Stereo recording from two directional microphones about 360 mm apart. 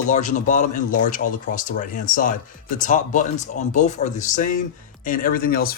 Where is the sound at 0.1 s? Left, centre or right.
Centre.